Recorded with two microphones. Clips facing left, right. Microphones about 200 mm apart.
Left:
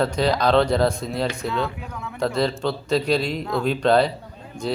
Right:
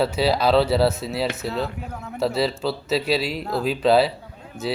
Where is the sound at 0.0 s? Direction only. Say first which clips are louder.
Even; 5° right (ahead or behind).